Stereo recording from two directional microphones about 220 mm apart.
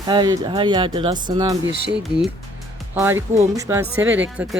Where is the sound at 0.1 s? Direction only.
20° right (ahead or behind).